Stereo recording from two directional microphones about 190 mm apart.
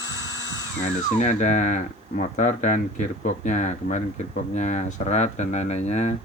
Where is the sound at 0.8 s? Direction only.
40° left (ahead or behind).